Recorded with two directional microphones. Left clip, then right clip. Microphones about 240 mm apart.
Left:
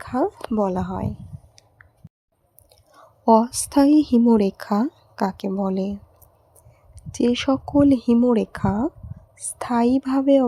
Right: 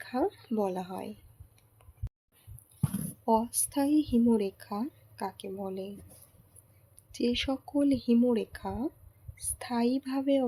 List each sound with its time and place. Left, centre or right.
0.0 s speech: left
3.2 s speech: left
7.1 s speech: left